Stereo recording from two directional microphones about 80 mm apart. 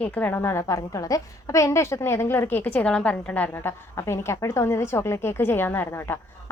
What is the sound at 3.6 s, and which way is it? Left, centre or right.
A woman's voice, left.